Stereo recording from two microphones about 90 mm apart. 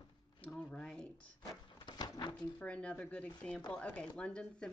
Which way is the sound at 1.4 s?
45° left (ahead or behind).